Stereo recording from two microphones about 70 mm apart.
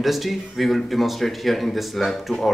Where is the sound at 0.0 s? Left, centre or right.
Centre.